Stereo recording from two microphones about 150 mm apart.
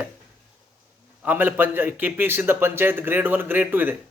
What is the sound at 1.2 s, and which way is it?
A man's voice, 10° right (ahead or behind).